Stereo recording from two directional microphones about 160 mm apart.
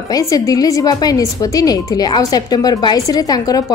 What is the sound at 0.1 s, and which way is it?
A woman's voice, 20° left (ahead or behind).